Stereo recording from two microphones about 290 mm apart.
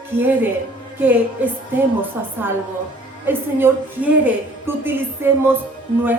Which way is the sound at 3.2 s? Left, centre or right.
Centre.